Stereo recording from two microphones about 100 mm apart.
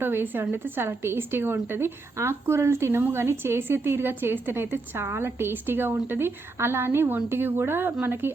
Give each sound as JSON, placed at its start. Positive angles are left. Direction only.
{"t": 0.0, "sound": "a woman's voice", "side_deg": -20}